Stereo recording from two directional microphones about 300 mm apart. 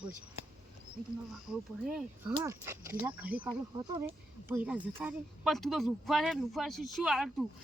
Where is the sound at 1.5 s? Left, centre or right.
Centre.